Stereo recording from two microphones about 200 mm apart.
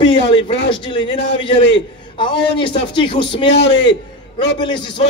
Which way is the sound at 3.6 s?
65° left (ahead or behind).